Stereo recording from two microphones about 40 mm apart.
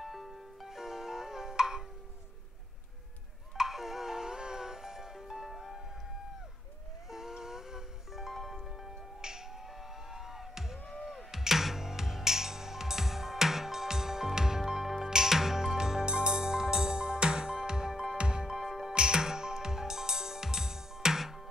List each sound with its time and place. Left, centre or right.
0.0 s music: centre
3.5 s music: centre
5.5 s music: centre
7.1 s music: centre
9.2 s finger snapping: centre
10.1 s music: centre
18.5 s music: centre
18.9 s music: centre